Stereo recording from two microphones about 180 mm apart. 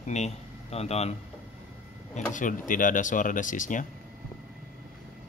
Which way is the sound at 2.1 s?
45° left (ahead or behind).